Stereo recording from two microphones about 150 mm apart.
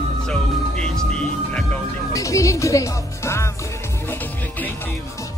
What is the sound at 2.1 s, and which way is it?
Speech, 20° left (ahead or behind).